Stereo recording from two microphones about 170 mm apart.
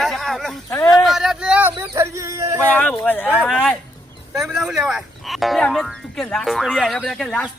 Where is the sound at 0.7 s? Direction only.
15° left (ahead or behind).